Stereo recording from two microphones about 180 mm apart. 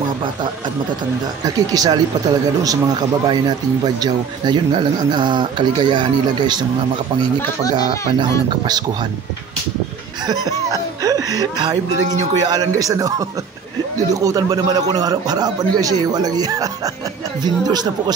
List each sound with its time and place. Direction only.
1.4 s speech: 20° right (ahead or behind)
7.7 s speech: 25° right (ahead or behind)
10.2 s speech: 20° right (ahead or behind)